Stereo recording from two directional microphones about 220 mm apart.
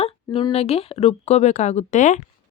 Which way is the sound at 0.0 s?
25° left (ahead or behind).